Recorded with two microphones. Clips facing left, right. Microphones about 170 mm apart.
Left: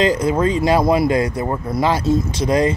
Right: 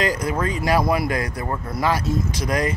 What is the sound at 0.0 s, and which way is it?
Speech, 25° left (ahead or behind).